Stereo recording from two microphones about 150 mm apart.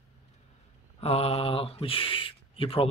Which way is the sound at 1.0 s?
40° left (ahead or behind).